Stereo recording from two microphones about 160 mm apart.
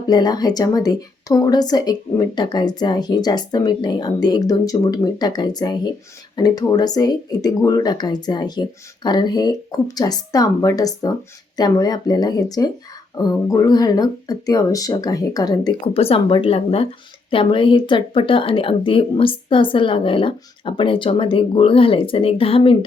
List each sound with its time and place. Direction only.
0.1 s speech: 25° left (ahead or behind)